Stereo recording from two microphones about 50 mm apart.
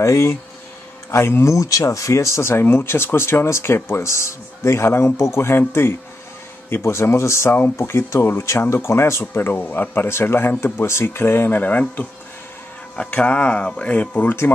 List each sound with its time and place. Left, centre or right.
0.0 s speech: left
1.1 s speech: left
1.5 s speech: left
2.6 s speech: left
8.2 s speech: left
8.5 s speech: left
9.3 s speech: left
10.0 s speech: left
13.1 s speech: left